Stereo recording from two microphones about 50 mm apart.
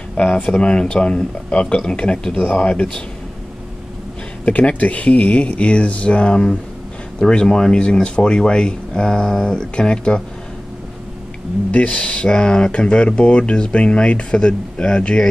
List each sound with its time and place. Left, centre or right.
0.1 s speech: left
4.5 s speech: left
11.7 s speech: left